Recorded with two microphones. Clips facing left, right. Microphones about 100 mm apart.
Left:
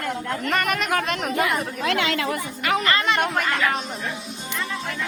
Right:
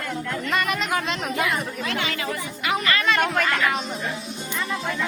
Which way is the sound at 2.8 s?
30° left (ahead or behind).